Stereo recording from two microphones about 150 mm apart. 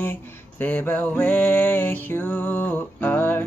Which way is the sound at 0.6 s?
10° left (ahead or behind).